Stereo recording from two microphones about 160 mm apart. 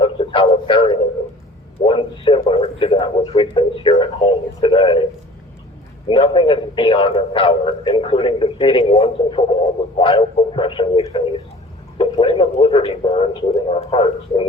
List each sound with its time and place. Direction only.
0.0 s a sound: 30° left (ahead or behind)
1.8 s a man's voice: 30° left (ahead or behind)
6.1 s a man's voice: 35° left (ahead or behind)